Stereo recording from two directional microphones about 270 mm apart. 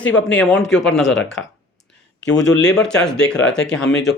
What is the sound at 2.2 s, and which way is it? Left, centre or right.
Speech, left.